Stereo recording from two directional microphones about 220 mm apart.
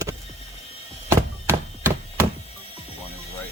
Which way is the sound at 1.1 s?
10° right (ahead or behind).